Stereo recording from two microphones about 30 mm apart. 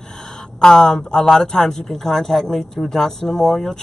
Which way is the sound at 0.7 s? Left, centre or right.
Centre.